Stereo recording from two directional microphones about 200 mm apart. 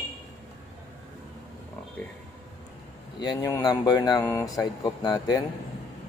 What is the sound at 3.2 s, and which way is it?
Speech, 20° left (ahead or behind).